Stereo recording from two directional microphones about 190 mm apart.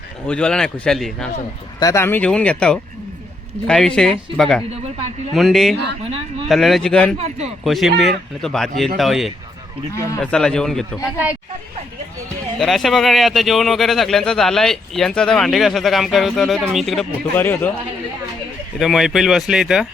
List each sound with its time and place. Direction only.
0.3 s speech: 5° left (ahead or behind)
1.8 s speech: 15° left (ahead or behind)
4.7 s a sound: 30° right (ahead or behind)
5.3 s speech: centre (ahead or behind)
7.2 s a man's voice: 35° right (ahead or behind)
7.6 s speech: centre (ahead or behind)
9.9 s speech: 15° left (ahead or behind)
10.2 s speech: 5° left (ahead or behind)
11.0 s speech: 10° right (ahead or behind)
12.5 s speech: centre (ahead or behind)
18.8 s speech: centre (ahead or behind)